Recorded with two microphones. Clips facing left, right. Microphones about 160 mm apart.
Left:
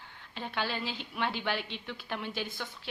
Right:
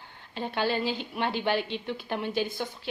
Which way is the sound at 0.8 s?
Centre (ahead or behind).